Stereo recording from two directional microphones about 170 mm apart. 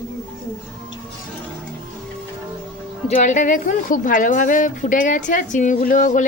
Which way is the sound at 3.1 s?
45° left (ahead or behind).